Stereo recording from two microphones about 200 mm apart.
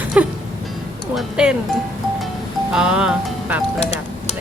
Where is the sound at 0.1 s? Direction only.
5° right (ahead or behind).